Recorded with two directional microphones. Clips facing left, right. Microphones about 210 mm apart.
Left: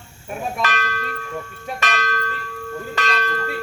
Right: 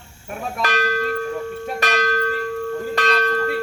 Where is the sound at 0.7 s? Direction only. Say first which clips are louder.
Right 6 dB; 35° right (ahead or behind).